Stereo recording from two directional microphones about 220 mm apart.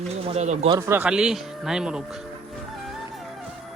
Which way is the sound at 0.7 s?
10° right (ahead or behind).